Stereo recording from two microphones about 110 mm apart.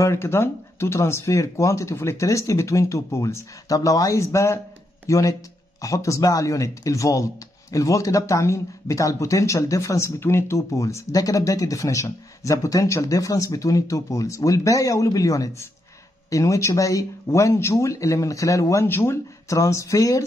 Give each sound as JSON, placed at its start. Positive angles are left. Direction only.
{"t": 0.0, "sound": "speech", "side_deg": 25}